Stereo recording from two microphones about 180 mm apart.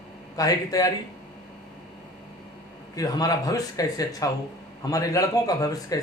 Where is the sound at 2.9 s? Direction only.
20° left (ahead or behind).